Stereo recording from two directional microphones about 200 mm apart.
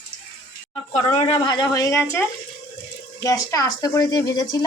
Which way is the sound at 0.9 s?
30° left (ahead or behind).